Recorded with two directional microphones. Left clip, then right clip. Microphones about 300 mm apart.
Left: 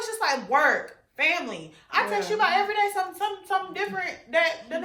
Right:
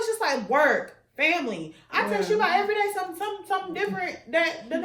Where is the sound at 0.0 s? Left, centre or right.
Centre.